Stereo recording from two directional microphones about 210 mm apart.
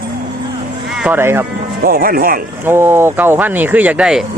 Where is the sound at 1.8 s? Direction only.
45° right (ahead or behind).